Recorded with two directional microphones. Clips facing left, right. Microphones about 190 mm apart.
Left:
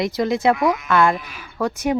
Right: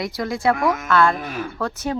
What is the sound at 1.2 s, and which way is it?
Speech, 50° right (ahead or behind).